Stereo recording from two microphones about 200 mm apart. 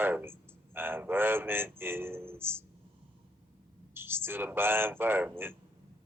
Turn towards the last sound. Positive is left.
turn(degrees=-10)  # may be behind; listen again after turning